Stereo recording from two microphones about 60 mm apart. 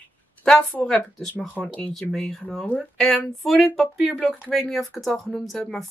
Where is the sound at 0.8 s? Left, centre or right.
Centre.